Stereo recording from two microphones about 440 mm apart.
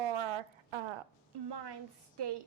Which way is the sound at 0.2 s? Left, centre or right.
Right.